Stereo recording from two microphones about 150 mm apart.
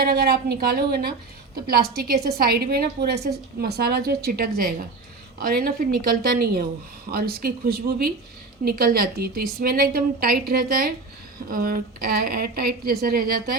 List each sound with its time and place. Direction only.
0.0 s a woman's voice: 90° right
5.5 s a woman's voice: 90° right